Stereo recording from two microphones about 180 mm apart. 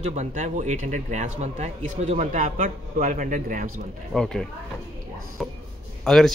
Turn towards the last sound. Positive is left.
turn(degrees=0)  # may be behind; listen again after turning